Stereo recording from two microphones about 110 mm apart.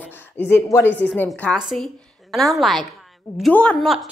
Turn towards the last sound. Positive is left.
turn(degrees=10)  # may be behind; listen again after turning